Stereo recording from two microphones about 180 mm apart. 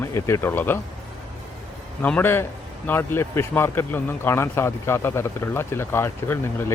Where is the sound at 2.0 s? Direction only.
10° left (ahead or behind).